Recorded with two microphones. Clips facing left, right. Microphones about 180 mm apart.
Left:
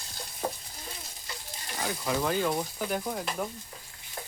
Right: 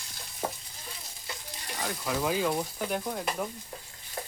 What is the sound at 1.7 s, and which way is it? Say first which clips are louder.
Speech: left 2 dB; centre (ahead or behind).